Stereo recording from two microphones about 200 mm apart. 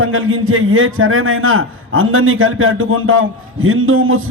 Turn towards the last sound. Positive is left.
turn(degrees=-90)